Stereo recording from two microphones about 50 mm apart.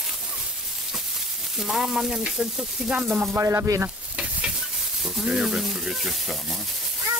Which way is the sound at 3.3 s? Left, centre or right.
Right.